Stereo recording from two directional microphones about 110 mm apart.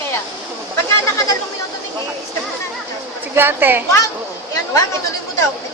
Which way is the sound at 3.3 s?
20° right (ahead or behind).